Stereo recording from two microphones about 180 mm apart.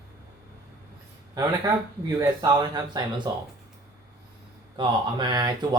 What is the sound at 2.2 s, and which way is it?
Speech, 20° right (ahead or behind).